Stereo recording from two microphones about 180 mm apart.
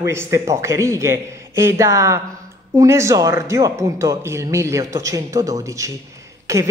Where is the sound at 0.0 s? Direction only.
15° right (ahead or behind).